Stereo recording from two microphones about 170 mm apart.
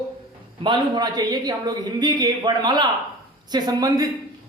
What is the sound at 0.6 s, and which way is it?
Speech, 25° right (ahead or behind).